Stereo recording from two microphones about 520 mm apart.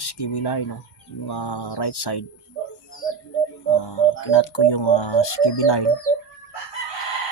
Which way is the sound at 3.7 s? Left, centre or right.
Left.